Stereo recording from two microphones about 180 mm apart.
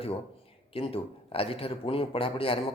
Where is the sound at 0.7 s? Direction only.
30° left (ahead or behind).